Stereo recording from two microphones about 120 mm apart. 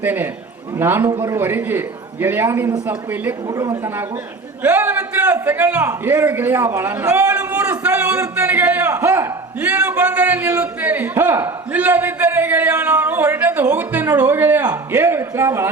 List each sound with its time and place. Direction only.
0.0 s a man's voice: 15° right (ahead or behind)
1.0 s speech: 40° right (ahead or behind)
1.3 s a man's voice: 15° right (ahead or behind)
3.4 s speech: 35° right (ahead or behind)
4.6 s a man's voice: 10° right (ahead or behind)
8.9 s a man's voice: 25° right (ahead or behind)
9.6 s a man's voice: 10° right (ahead or behind)